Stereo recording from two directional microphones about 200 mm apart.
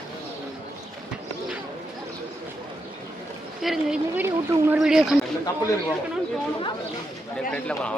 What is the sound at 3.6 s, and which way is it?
Speech, 5° right (ahead or behind).